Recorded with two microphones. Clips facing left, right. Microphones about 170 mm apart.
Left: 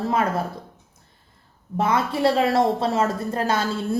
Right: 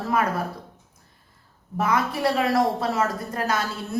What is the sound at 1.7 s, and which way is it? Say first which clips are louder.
A woman's voice: left 2 dB; 25° left (ahead or behind).